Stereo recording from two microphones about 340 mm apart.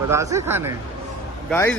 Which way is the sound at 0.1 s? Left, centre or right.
Centre.